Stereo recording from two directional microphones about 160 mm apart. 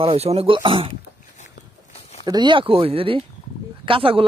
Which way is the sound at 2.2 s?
25° right (ahead or behind).